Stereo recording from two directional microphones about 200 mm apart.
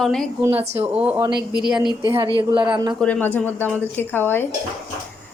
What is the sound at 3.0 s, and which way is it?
A woman's voice, 10° left (ahead or behind).